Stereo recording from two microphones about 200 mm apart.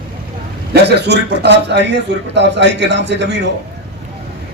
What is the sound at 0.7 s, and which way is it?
A man's voice, 55° right (ahead or behind).